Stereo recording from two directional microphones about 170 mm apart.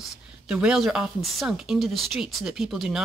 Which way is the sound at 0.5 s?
5° right (ahead or behind).